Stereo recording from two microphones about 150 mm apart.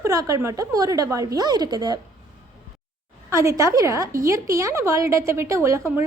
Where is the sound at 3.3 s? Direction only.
20° right (ahead or behind).